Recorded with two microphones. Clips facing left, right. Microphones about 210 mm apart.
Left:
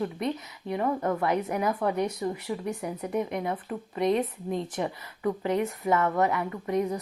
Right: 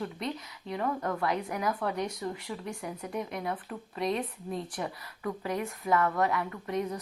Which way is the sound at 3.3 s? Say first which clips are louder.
Left 4 dB; 20° left (ahead or behind).